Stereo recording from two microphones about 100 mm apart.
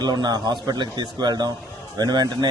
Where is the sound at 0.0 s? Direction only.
45° right (ahead or behind).